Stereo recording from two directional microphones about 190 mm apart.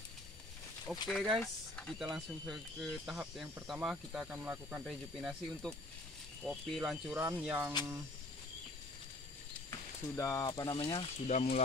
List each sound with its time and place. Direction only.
0.9 s speech: 5° right (ahead or behind)
9.7 s speech: 15° left (ahead or behind); by 11.6 s 35° left (ahead or behind)